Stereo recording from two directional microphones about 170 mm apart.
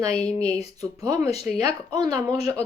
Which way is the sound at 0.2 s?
40° left (ahead or behind).